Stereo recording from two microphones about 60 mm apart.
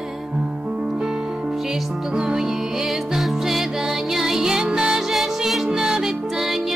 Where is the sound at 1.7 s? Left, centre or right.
Centre.